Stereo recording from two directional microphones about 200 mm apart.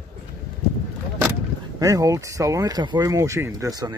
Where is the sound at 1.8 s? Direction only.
15° right (ahead or behind).